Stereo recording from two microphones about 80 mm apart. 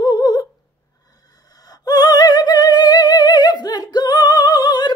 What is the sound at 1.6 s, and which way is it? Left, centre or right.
Music, left.